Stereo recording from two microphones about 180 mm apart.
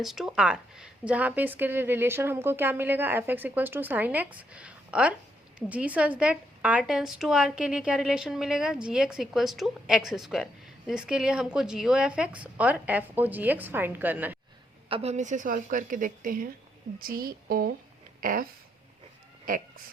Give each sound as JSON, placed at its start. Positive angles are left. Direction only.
{"t": 0.0, "sound": "a woman's voice", "side_deg": 0}
{"t": 14.8, "sound": "a woman's voice", "side_deg": -35}
{"t": 18.2, "sound": "a sound", "side_deg": -50}
{"t": 19.5, "sound": "speech", "side_deg": -50}